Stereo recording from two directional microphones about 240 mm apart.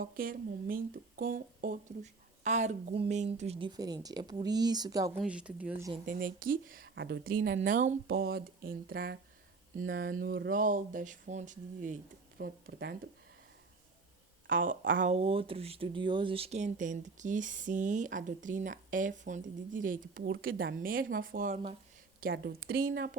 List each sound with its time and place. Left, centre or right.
0.0 s speech: right; by 5.2 s centre
5.2 s speech: centre
6.1 s speech: right
7.4 s speech: right
8.1 s speech: right
9.8 s speech: right
14.4 s a woman's voice: right
15.0 s speech: right
20.1 s speech: right